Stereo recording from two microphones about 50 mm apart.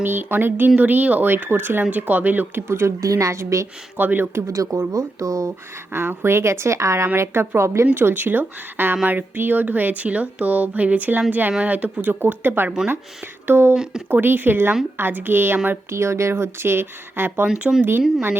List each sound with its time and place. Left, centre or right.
0.0 s speech: right
2.6 s a woman's voice: right
3.9 s speech: right
4.4 s speech: right
5.9 s speech: right
7.2 s speech: right
7.9 s speech: right
12.2 s speech: right
15.9 s speech: right
16.3 s speech: right